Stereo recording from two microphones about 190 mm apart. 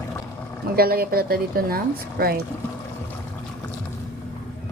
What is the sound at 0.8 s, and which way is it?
A woman's voice, 55° right (ahead or behind).